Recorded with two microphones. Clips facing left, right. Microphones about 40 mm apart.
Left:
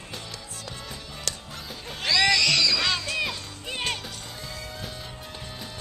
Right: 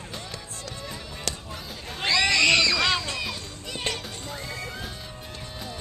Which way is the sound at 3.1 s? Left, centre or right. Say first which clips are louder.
Left 3 dB; centre.